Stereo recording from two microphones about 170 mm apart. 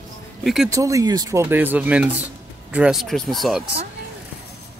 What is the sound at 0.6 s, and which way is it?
Speech, 20° right (ahead or behind).